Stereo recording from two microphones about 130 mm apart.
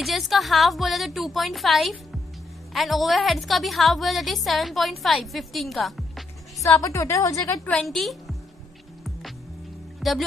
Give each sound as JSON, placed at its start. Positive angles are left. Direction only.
{"t": 0.0, "sound": "a woman's voice", "side_deg": 0}
{"t": 6.6, "sound": "a woman's voice", "side_deg": 25}
{"t": 7.6, "sound": "a woman's voice", "side_deg": 5}
{"t": 9.9, "sound": "music", "side_deg": 0}